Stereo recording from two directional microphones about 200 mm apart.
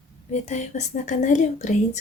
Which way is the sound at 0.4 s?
35° left (ahead or behind).